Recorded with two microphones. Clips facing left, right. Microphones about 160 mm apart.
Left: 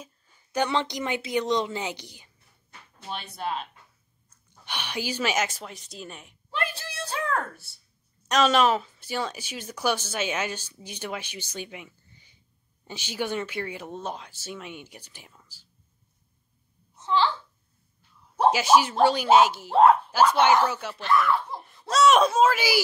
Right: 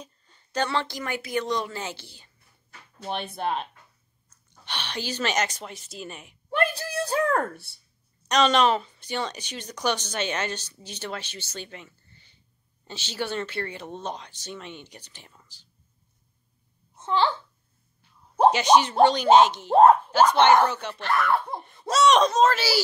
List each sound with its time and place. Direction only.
0.0 s a woman's voice: 5° left (ahead or behind)
3.1 s speech: 55° right (ahead or behind)
4.6 s a woman's voice: 10° left (ahead or behind)
6.5 s a sound: 45° right (ahead or behind)
8.3 s a woman's voice: 5° left (ahead or behind)
16.9 s babbling: 50° right (ahead or behind)
18.5 s a woman's voice: 5° left (ahead or behind)
19.7 s speech: 45° right (ahead or behind)
20.6 s a woman's voice: 5° left (ahead or behind)
21.0 s speech: 60° right (ahead or behind)
21.5 s a woman's voice: centre (ahead or behind)